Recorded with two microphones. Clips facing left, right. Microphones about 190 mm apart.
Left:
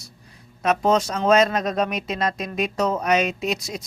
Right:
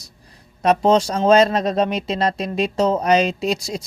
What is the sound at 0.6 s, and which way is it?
Speech, 35° right (ahead or behind).